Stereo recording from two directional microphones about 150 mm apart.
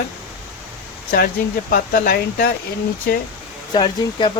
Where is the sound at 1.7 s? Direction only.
70° left (ahead or behind).